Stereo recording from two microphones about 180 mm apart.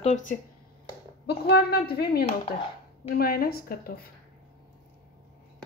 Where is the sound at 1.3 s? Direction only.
60° left (ahead or behind).